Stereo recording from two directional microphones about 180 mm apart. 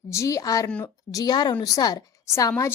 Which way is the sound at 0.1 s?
15° left (ahead or behind).